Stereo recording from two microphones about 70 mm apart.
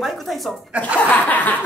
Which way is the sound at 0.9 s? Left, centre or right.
Left.